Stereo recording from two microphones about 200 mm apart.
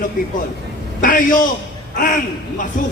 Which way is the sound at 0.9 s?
40° left (ahead or behind).